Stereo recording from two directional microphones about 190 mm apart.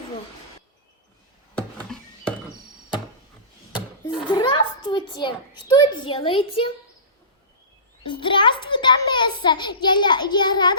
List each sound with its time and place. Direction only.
1.5 s a sound: 5° left (ahead or behind)
4.3 s a child's voice: 25° left (ahead or behind)
8.0 s a child's voice: 25° left (ahead or behind)